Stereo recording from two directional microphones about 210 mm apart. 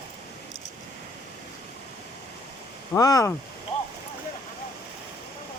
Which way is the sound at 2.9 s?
15° left (ahead or behind).